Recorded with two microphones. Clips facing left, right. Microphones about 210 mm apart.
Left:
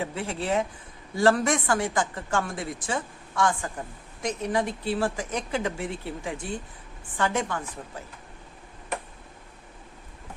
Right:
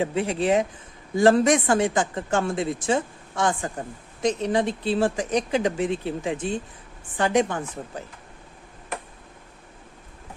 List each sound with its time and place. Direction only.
0.0 s speech: 20° right (ahead or behind)
7.8 s speech: 30° right (ahead or behind)